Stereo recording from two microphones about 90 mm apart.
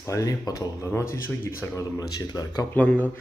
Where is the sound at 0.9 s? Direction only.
25° left (ahead or behind).